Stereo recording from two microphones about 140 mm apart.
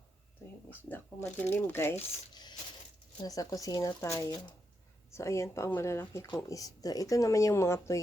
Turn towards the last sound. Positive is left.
turn(degrees=20)  # may be behind; listen again after turning